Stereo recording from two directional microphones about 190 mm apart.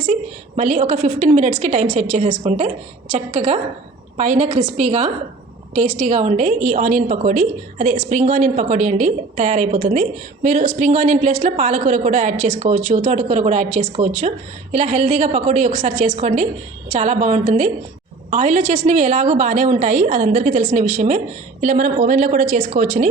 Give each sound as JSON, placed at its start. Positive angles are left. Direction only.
{"t": 0.0, "sound": "a woman's voice", "side_deg": -35}